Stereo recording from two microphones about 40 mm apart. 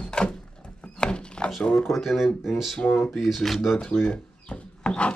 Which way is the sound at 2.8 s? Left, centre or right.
Left.